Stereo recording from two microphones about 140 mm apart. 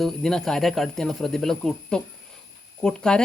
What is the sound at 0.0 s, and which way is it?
Speech, centre (ahead or behind).